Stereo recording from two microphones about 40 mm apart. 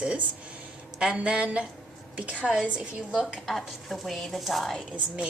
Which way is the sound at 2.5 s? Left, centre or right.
Centre.